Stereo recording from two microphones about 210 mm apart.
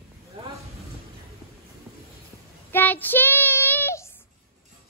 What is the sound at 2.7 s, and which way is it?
Child singing, 10° left (ahead or behind).